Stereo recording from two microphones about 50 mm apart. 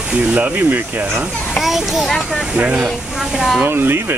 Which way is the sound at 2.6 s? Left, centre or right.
Right.